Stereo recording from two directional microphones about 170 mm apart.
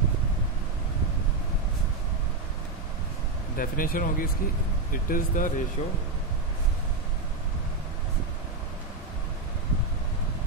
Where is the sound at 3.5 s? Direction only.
55° left (ahead or behind).